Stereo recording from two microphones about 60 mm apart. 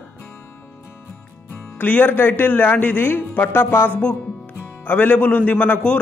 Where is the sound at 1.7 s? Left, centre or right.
Left.